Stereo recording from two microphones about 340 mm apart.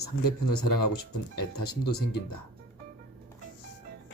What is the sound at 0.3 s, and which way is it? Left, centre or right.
Speech, left.